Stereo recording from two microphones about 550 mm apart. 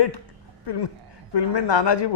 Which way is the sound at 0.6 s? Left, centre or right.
Left.